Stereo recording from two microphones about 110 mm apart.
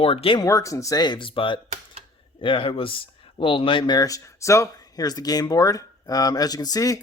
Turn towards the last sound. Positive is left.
turn(degrees=35)  # may be behind; listen again after turning